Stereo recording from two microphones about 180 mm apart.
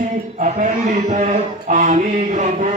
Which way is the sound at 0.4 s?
40° right (ahead or behind).